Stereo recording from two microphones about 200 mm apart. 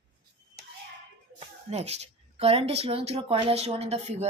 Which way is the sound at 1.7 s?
30° right (ahead or behind).